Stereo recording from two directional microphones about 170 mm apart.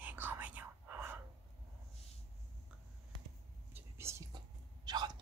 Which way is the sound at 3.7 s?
15° right (ahead or behind).